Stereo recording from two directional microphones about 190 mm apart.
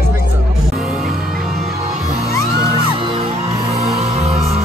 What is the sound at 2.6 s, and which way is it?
Music, 30° right (ahead or behind).